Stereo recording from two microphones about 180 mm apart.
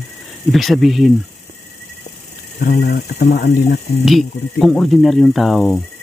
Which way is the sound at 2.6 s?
55° left (ahead or behind).